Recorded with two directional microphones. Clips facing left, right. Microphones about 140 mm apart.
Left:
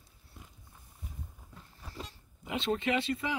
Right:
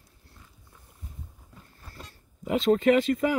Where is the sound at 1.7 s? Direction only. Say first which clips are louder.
Left 3 dB; 15° left (ahead or behind).